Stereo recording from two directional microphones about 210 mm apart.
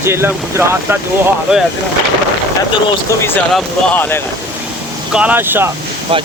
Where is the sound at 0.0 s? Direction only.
10° right (ahead or behind).